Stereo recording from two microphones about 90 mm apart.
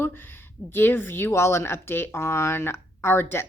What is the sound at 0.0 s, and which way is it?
A woman's voice, 25° left (ahead or behind).